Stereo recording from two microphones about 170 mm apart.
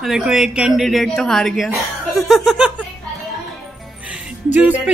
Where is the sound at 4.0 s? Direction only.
5° right (ahead or behind).